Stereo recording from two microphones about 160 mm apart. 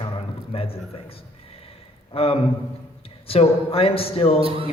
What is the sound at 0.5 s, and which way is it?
A man's voice, 35° left (ahead or behind).